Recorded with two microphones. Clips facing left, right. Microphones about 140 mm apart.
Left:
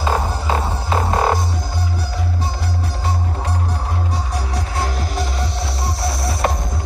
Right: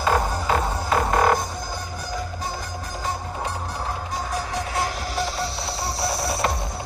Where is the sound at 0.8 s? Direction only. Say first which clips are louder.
Left 1 dB; 30° left (ahead or behind).